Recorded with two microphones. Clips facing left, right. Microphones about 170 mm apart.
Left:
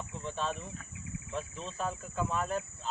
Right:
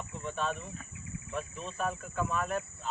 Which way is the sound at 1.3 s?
30° left (ahead or behind).